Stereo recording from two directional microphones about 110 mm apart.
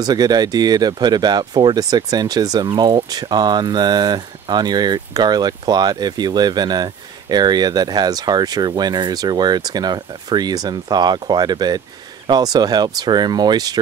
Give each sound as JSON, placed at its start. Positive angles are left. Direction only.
{"t": 0.0, "sound": "speech", "side_deg": -35}